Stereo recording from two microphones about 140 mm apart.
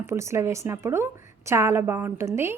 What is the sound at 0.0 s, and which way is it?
A woman's voice, 20° right (ahead or behind).